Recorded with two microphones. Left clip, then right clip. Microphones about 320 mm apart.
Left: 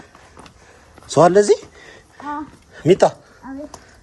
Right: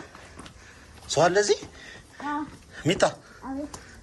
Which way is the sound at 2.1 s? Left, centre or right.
Centre.